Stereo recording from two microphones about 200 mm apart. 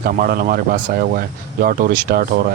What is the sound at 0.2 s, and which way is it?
Speech, 45° right (ahead or behind).